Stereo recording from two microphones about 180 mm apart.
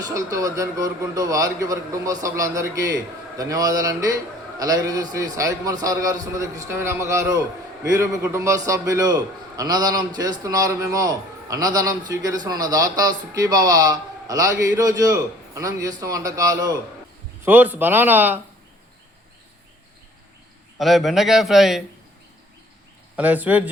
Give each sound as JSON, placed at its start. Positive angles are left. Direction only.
{"t": 0.0, "sound": "a man's voice", "side_deg": -20}
{"t": 20.7, "sound": "a man's voice", "side_deg": 0}
{"t": 23.1, "sound": "speech", "side_deg": -10}